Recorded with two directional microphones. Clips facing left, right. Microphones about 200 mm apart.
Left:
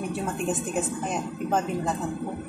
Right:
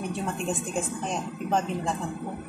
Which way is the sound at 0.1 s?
5° left (ahead or behind).